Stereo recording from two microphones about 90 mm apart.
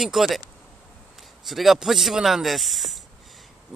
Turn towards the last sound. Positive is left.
turn(degrees=0)  # may be behind; listen again after turning